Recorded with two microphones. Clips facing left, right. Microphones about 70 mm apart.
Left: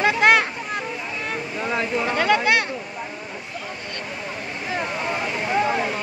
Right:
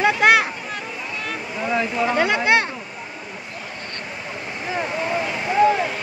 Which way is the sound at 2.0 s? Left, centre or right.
Centre.